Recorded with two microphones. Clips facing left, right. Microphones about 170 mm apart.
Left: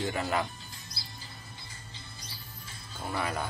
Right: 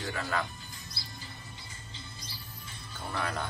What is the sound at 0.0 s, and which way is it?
Speech, 20° left (ahead or behind).